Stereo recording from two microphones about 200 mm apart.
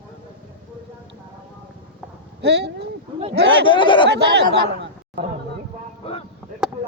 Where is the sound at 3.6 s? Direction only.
25° left (ahead or behind).